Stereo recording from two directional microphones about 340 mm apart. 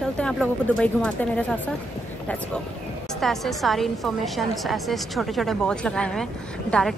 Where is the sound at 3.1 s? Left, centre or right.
Centre.